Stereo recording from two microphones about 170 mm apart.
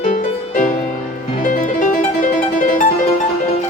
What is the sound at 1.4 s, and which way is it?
Music, 50° left (ahead or behind).